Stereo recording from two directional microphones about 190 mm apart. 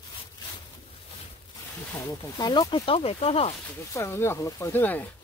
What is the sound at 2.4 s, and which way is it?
Speech, 20° left (ahead or behind).